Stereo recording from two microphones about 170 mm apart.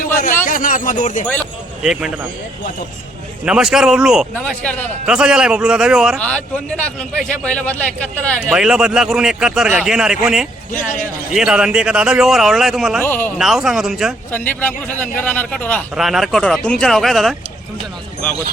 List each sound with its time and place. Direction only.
0.0 s a sound: 55° left (ahead or behind)
1.8 s speech: 5° right (ahead or behind)
3.4 s speech: 5° right (ahead or behind)
4.6 s a man's voice: 10° left (ahead or behind)
5.0 s speech: 5° right (ahead or behind)
6.1 s a man's voice: 5° left (ahead or behind)
8.4 s speech: 5° right (ahead or behind)
13.1 s a man's voice: 10° left (ahead or behind)
13.4 s speech: 5° right (ahead or behind)
15.2 s a man's voice: 10° left (ahead or behind)
16.0 s speech: centre (ahead or behind)